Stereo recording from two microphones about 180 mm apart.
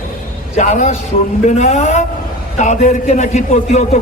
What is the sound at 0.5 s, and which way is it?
A man's voice, 40° left (ahead or behind).